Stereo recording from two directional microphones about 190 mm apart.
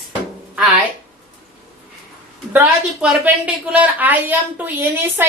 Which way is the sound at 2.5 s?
10° right (ahead or behind).